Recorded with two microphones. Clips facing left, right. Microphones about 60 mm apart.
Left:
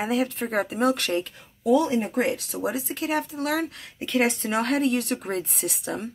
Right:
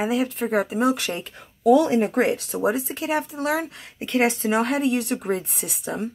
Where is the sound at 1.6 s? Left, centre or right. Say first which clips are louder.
Right 4 dB; right.